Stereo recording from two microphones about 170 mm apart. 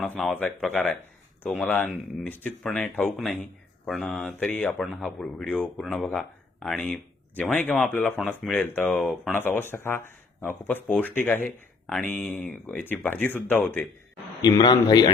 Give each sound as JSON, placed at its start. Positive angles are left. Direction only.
{"t": 0.0, "sound": "speech", "side_deg": 5}
{"t": 9.3, "sound": "speech", "side_deg": 10}
{"t": 14.4, "sound": "speech", "side_deg": 25}